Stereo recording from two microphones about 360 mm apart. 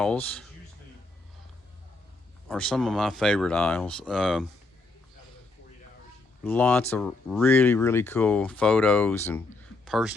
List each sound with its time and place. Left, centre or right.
0.0 s speech: centre
2.5 s speech: centre
6.4 s speech: centre